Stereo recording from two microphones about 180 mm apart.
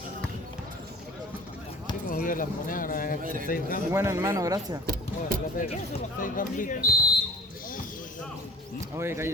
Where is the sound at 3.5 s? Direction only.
50° left (ahead or behind).